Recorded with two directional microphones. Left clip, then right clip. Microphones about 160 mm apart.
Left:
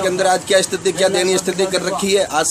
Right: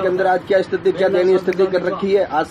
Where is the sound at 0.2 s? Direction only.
30° left (ahead or behind).